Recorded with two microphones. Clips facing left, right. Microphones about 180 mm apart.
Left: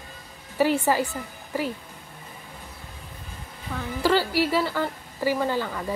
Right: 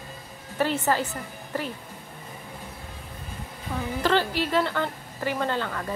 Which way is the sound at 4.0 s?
10° left (ahead or behind).